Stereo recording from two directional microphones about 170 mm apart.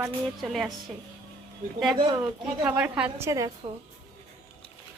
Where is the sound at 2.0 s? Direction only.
25° right (ahead or behind).